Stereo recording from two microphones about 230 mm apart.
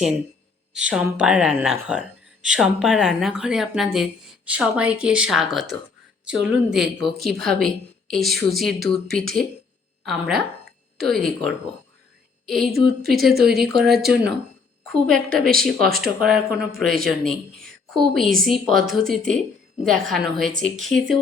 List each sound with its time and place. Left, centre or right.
0.7 s a woman's voice: centre